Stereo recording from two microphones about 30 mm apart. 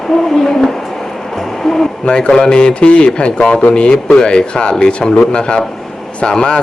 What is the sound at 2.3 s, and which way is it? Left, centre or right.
Speech, left.